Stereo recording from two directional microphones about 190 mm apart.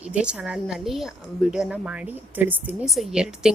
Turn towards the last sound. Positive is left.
turn(degrees=-5)  # may be behind; listen again after turning